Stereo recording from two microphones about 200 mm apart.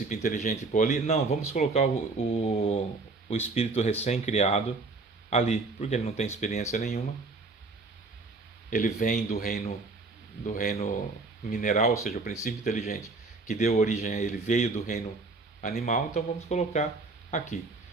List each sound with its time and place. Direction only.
0.1 s speech: 40° left (ahead or behind)
8.7 s speech: 40° left (ahead or behind)